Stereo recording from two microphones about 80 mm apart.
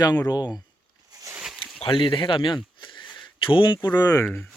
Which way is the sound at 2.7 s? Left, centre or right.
Left.